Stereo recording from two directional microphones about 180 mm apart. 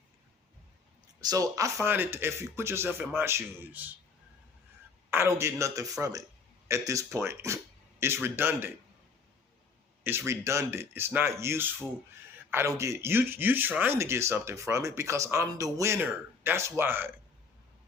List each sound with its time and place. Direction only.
1.2 s speech: 20° right (ahead or behind)
5.1 s speech: 15° right (ahead or behind)
10.0 s speech: 15° right (ahead or behind)